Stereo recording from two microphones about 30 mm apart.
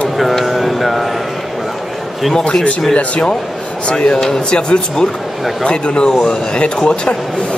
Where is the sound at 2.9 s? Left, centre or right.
Left.